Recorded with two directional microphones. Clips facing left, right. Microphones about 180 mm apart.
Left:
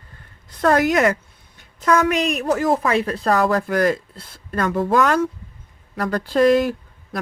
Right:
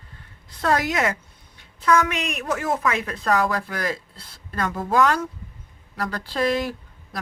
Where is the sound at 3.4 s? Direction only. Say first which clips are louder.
Left 8 dB; 50° left (ahead or behind).